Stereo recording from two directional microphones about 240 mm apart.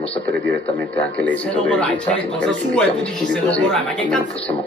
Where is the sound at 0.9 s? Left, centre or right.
Centre.